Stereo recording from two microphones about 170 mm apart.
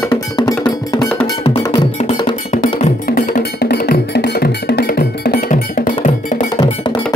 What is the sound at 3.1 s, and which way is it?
Music, 65° left (ahead or behind).